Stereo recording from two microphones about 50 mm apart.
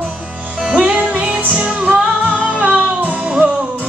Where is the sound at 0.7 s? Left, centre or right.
Right.